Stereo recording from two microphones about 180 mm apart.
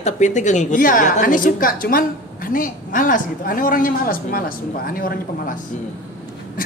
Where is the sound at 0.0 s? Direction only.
40° left (ahead or behind).